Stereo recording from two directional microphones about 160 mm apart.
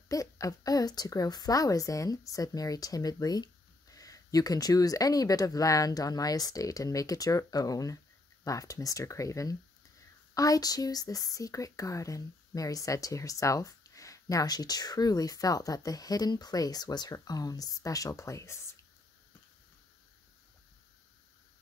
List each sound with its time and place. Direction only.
0.1 s speech: 20° left (ahead or behind)